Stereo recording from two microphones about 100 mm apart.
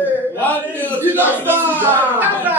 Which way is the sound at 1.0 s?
20° right (ahead or behind).